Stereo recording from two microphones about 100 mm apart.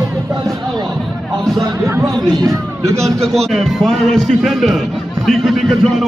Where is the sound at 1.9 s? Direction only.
25° right (ahead or behind).